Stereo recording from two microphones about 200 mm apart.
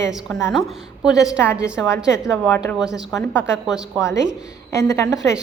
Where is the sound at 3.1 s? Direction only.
15° left (ahead or behind).